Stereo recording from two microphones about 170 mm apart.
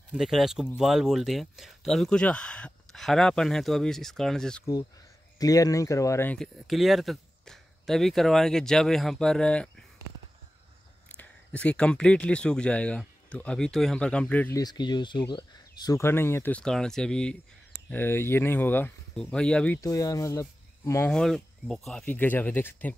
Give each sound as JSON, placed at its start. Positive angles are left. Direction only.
{"t": 0.1, "sound": "speech", "side_deg": 0}
{"t": 5.4, "sound": "speech", "side_deg": 20}
{"t": 6.3, "sound": "speech", "side_deg": 0}
{"t": 11.1, "sound": "speech", "side_deg": 10}
{"t": 14.6, "sound": "speech", "side_deg": 25}
{"t": 19.8, "sound": "speech", "side_deg": 20}
{"t": 21.1, "sound": "speech", "side_deg": 5}